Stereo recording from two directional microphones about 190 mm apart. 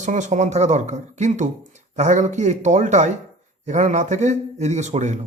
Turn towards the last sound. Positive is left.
turn(degrees=-40)  # may be behind; listen again after turning